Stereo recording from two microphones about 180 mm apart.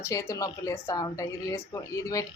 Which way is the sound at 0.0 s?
15° left (ahead or behind).